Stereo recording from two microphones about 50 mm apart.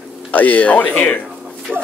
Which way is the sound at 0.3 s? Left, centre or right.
Left.